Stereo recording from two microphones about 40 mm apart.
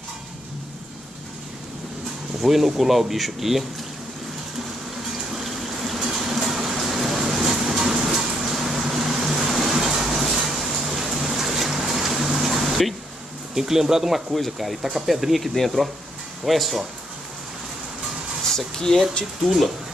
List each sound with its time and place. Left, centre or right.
2.4 s speech: centre
5.3 s pump: centre
13.6 s speech: centre
14.3 s speech: centre
18.9 s speech: left
19.4 s speech: centre